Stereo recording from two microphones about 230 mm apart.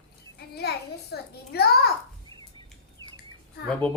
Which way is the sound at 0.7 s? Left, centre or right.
Left.